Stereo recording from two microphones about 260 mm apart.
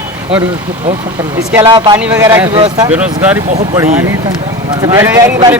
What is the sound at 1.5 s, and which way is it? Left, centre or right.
Speech, centre.